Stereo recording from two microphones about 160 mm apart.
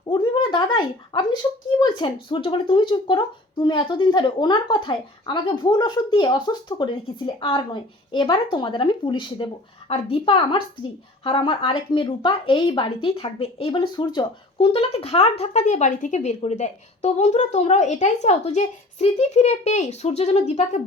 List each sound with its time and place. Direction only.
0.0 s a woman's voice: 30° left (ahead or behind)
13.9 s speech: 25° left (ahead or behind); by 20.8 s 45° left (ahead or behind)